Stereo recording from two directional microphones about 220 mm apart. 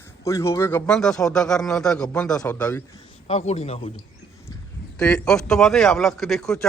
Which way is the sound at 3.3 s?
30° left (ahead or behind).